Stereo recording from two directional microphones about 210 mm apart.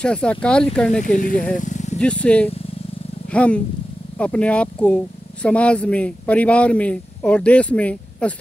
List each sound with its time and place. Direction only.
0.0 s speech: 5° left (ahead or behind)
1.0 s speech: 40° left (ahead or behind)
1.6 s vehicle: 35° left (ahead or behind)
2.0 s speech: 5° left (ahead or behind)